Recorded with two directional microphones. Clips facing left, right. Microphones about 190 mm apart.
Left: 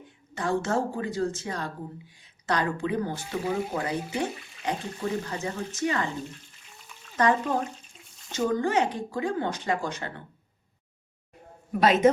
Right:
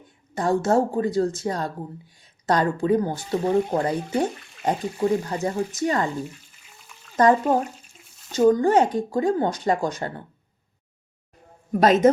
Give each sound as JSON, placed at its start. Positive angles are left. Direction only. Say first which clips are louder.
{"t": 0.3, "sound": "speech", "louder": "right 6 dB", "side_deg": -40}
{"t": 4.3, "sound": "speech", "louder": "even", "side_deg": 0}
{"t": 4.6, "sound": "speech", "louder": "right 7 dB", "side_deg": -45}
{"t": 6.6, "sound": "frying", "louder": "even", "side_deg": 0}
{"t": 7.2, "sound": "speech", "louder": "right 6 dB", "side_deg": -40}
{"t": 7.9, "sound": "a sound", "louder": "even", "side_deg": 0}
{"t": 8.4, "sound": "speech", "louder": "right 8 dB", "side_deg": -40}
{"t": 11.7, "sound": "speech", "louder": "right 4 dB", "side_deg": -40}